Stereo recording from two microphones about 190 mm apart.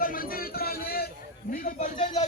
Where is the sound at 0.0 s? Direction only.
50° left (ahead or behind).